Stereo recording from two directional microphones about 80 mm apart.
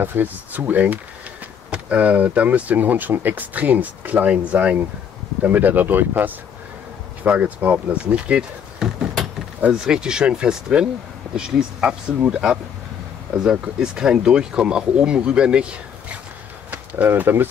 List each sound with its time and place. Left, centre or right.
0.0 s speech: right
16.7 s speech: right